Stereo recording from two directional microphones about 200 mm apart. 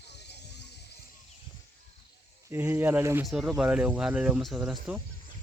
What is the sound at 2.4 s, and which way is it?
Speech, 10° right (ahead or behind).